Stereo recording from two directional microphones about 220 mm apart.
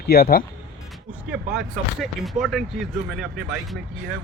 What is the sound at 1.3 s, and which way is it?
Speech, 5° right (ahead or behind).